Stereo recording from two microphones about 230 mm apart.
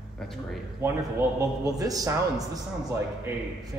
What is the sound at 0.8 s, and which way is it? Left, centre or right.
A man's voice, centre.